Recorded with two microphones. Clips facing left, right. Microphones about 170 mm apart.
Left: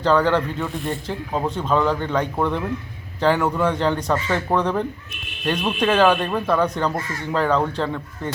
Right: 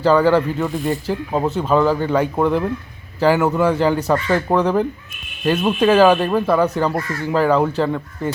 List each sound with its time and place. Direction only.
0.0 s speech: 5° right (ahead or behind)